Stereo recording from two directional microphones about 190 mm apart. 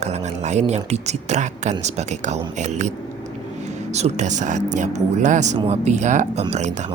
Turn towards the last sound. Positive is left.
turn(degrees=-40)  # may be behind; listen again after turning